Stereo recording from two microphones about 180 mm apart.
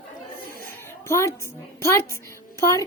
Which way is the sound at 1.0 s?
15° left (ahead or behind).